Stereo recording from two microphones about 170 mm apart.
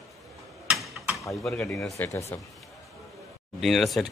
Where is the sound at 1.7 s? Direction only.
15° left (ahead or behind).